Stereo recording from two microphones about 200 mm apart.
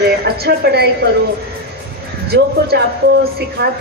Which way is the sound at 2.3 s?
50° right (ahead or behind).